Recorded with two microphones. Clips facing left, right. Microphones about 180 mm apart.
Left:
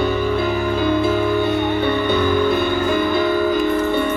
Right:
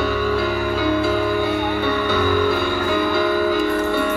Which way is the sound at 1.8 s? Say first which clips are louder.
Left 2 dB; 20° left (ahead or behind).